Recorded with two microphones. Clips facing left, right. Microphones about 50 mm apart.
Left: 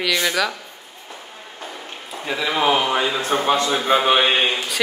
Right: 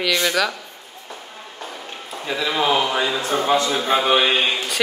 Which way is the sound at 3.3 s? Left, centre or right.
Left.